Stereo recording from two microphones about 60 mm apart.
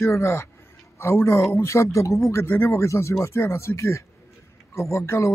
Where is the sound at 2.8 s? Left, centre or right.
Left.